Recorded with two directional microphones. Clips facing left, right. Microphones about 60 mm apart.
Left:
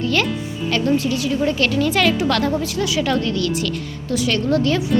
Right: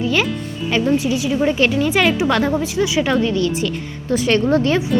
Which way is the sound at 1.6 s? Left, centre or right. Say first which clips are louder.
Right 1 dB; centre.